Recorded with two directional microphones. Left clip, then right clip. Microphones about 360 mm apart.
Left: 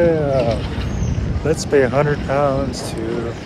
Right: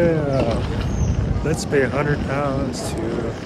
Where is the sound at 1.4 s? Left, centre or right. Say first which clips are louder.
Left 5 dB; centre.